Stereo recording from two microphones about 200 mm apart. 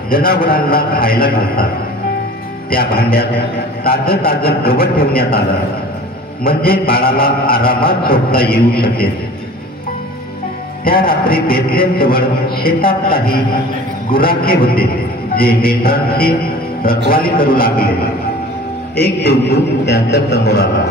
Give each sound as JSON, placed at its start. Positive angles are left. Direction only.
{"t": 0.1, "sound": "a man's voice", "side_deg": 45}
{"t": 2.7, "sound": "a man's voice", "side_deg": 50}
{"t": 6.4, "sound": "a man's voice", "side_deg": 50}
{"t": 10.8, "sound": "a man's voice", "side_deg": 45}
{"t": 18.9, "sound": "a man's voice", "side_deg": 55}